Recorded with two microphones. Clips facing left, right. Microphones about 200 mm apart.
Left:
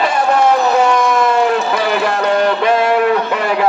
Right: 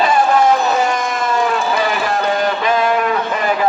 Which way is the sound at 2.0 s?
65° left (ahead or behind).